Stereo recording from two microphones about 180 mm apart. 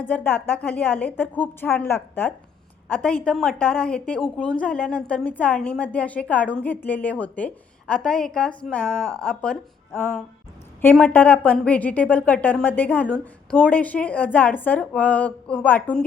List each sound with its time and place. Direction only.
0.1 s a woman's voice: 10° left (ahead or behind)